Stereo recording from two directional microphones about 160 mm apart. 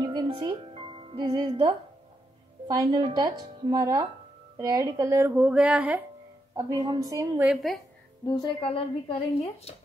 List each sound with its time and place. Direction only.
0.0 s music: 25° right (ahead or behind)
2.7 s speech: 25° right (ahead or behind)
6.5 s speech: 25° right (ahead or behind)
7.3 s speech: 5° right (ahead or behind)
8.4 s a woman's voice: 35° left (ahead or behind)